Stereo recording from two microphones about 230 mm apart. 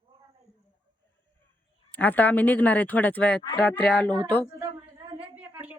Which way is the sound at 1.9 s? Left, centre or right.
Centre.